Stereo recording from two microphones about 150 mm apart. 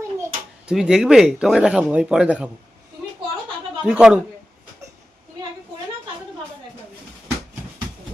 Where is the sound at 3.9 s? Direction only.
5° right (ahead or behind).